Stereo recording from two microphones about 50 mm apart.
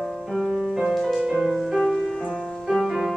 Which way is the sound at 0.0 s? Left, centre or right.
Centre.